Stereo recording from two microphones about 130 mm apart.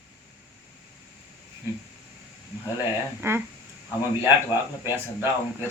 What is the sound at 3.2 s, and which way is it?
Speech, 15° right (ahead or behind).